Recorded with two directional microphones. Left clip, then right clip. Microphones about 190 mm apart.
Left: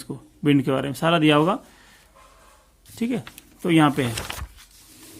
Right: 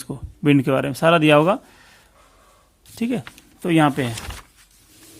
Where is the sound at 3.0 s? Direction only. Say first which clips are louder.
Right 2 dB; 30° right (ahead or behind).